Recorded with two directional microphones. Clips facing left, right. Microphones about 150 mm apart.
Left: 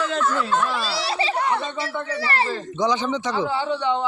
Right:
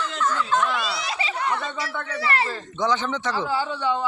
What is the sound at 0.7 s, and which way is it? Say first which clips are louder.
A man's voice: left 3 dB; 30° left (ahead or behind).